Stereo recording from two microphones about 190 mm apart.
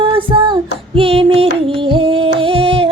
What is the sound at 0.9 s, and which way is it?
Music, 30° right (ahead or behind).